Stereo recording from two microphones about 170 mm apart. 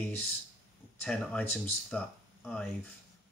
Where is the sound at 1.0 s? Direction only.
5° left (ahead or behind).